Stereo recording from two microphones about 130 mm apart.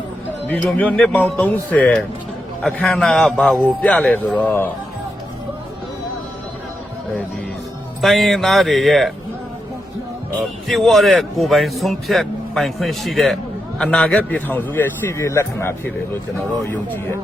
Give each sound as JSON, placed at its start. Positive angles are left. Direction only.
{"t": 0.5, "sound": "a man's voice", "side_deg": 10}
{"t": 8.0, "sound": "a man's voice", "side_deg": 0}
{"t": 10.7, "sound": "a man's voice", "side_deg": 0}